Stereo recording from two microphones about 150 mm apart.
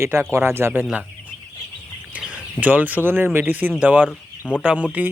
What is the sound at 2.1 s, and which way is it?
Speech, 10° right (ahead or behind).